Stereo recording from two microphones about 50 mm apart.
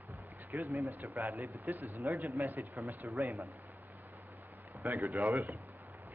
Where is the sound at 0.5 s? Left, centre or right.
Right.